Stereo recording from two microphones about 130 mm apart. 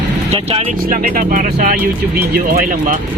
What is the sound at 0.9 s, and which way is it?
Speech, 90° right.